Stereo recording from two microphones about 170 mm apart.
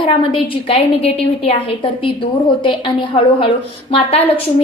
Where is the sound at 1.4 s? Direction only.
30° left (ahead or behind).